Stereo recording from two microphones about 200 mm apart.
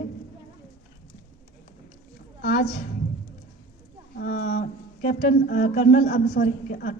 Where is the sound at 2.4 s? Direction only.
55° left (ahead or behind).